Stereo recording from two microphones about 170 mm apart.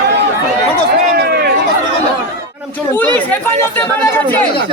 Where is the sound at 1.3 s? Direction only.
65° right (ahead or behind).